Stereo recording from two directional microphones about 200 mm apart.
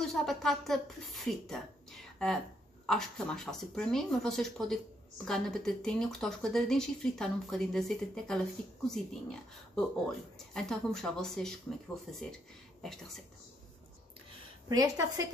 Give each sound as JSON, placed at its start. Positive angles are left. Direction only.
{"t": 0.0, "sound": "speech", "side_deg": 0}
{"t": 14.7, "sound": "a woman's voice", "side_deg": -15}